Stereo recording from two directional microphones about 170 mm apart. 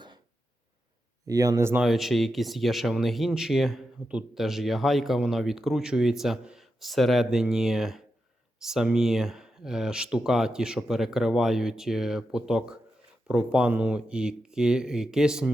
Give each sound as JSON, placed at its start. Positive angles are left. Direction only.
{"t": 1.3, "sound": "speech", "side_deg": -20}
{"t": 1.8, "sound": "speech", "side_deg": 0}